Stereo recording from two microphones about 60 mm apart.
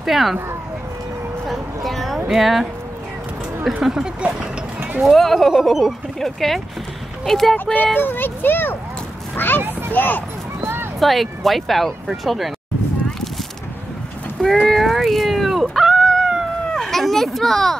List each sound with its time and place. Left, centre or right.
0.0 s speech: centre
1.5 s a sound: centre
3.6 s speech: centre
7.7 s a child's voice: left
9.6 s a child's voice: right
9.9 s a child's voice: left
10.6 s a sound: right
11.0 s speech: centre
14.4 s a sound: centre
16.7 s children playing: centre